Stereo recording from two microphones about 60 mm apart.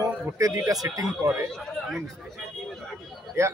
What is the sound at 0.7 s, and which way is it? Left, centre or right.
Speech, right.